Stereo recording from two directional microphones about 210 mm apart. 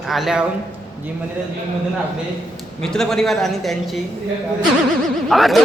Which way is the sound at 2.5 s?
Centre (ahead or behind).